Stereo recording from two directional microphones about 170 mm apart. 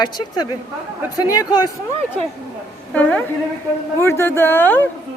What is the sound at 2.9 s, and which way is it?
A woman's voice, 10° left (ahead or behind).